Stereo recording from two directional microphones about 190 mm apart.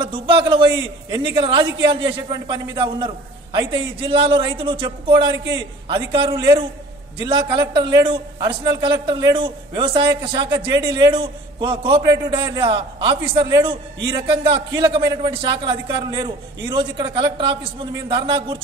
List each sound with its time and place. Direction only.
0.0 s a man's voice: 25° right (ahead or behind)